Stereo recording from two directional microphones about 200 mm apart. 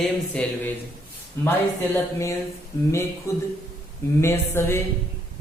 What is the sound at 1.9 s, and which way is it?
Speech, 15° left (ahead or behind).